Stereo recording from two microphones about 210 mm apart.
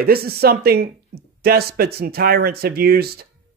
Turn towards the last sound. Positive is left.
turn(degrees=-50)  # may be behind; listen again after turning